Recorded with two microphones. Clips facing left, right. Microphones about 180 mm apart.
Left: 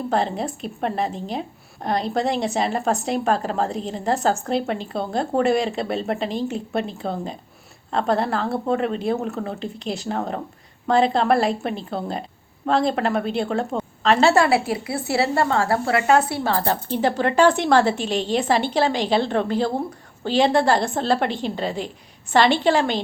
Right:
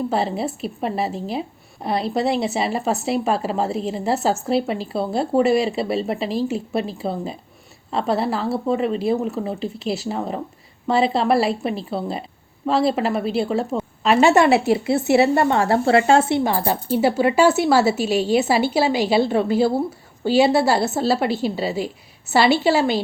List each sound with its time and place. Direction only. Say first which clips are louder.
0.1 s a woman's voice: right 1 dB; 5° right (ahead or behind); by 16.4 s 25° right (ahead or behind)
16.4 s a woman's voice: right 1 dB; 15° right (ahead or behind)